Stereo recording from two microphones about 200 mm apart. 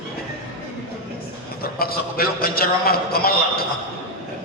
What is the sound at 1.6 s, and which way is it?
A man's voice, 50° left (ahead or behind).